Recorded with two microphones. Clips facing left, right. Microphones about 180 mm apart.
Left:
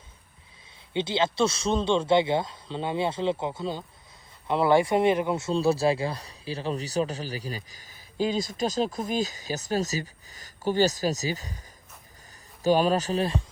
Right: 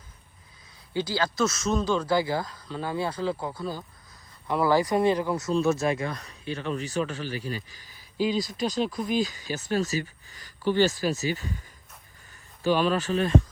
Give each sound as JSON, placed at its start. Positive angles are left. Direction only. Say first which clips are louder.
{"t": 0.9, "sound": "speech", "louder": "left 2 dB", "side_deg": 25}
{"t": 12.6, "sound": "speech", "louder": "left 2 dB", "side_deg": 40}